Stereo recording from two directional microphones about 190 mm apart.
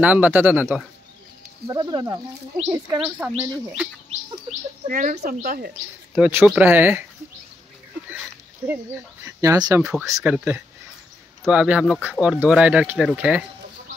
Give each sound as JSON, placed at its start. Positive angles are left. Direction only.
{"t": 0.0, "sound": "speech", "side_deg": -10}
{"t": 1.7, "sound": "speech", "side_deg": -25}
{"t": 4.5, "sound": "speech", "side_deg": -45}
{"t": 6.1, "sound": "speech", "side_deg": -5}
{"t": 9.2, "sound": "speech", "side_deg": -15}